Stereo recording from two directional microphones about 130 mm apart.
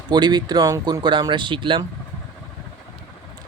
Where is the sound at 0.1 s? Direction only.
35° right (ahead or behind).